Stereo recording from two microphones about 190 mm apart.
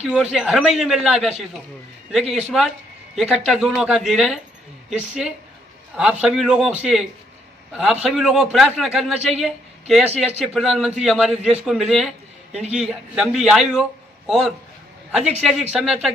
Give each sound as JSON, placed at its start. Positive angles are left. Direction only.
{"t": 0.0, "sound": "a man's voice", "side_deg": -5}
{"t": 2.5, "sound": "a man's voice", "side_deg": 0}
{"t": 10.1, "sound": "a man's voice", "side_deg": -35}
{"t": 10.4, "sound": "a man's voice", "side_deg": 0}